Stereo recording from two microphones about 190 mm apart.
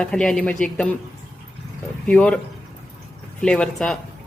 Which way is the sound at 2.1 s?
5° left (ahead or behind).